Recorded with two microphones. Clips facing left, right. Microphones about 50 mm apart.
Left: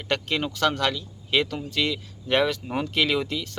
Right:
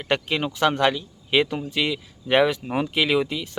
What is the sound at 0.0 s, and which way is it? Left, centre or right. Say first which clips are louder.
Speech: right 2 dB; centre.